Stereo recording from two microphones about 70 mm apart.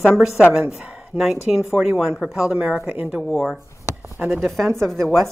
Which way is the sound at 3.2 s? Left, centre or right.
Centre.